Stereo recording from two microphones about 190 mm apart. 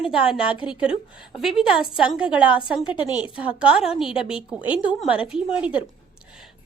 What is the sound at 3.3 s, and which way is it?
A woman's voice, 5° right (ahead or behind).